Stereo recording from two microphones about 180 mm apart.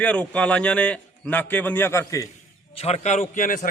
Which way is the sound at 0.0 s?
5° left (ahead or behind).